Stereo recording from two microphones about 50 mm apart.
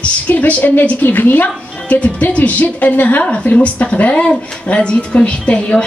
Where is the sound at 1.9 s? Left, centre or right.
Left.